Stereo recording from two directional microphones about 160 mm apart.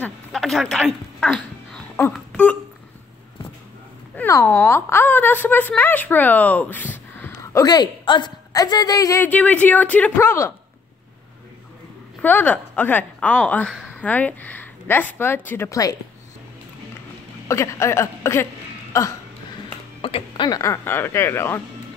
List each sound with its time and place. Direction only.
0.0 s a sound: centre (ahead or behind)
4.1 s a woman's voice: 15° left (ahead or behind)
7.6 s a woman's voice: 25° left (ahead or behind)
12.2 s a woman's voice: 10° left (ahead or behind)
17.5 s a woman's voice: 20° left (ahead or behind)
20.0 s a sound: 35° left (ahead or behind)
20.4 s a woman's voice: 20° left (ahead or behind)